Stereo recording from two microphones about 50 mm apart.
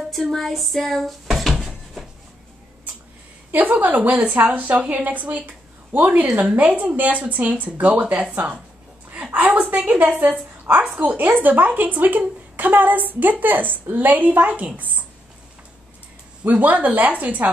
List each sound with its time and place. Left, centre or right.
0.1 s speech: centre
3.5 s a woman's voice: right
9.1 s a sound: right
9.4 s a woman's voice: right
16.4 s a woman's voice: right